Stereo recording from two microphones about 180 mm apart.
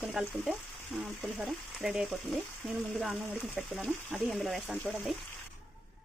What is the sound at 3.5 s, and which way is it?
Speech, 5° left (ahead or behind).